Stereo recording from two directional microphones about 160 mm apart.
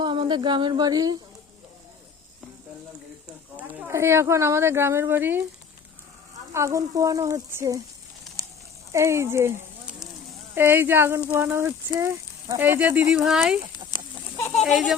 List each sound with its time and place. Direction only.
0.0 s speech: 30° right (ahead or behind)
3.6 s speech: 10° right (ahead or behind)
6.5 s speech: 20° right (ahead or behind)
8.9 s speech: 20° right (ahead or behind); by 14.9 s centre (ahead or behind)